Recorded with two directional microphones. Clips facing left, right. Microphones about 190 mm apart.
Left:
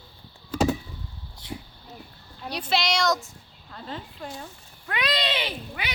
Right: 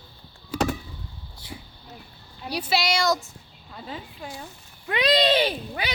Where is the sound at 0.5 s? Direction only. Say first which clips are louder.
Left 2 dB; 10° right (ahead or behind).